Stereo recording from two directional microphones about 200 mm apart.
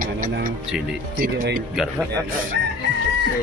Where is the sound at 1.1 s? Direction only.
45° right (ahead or behind).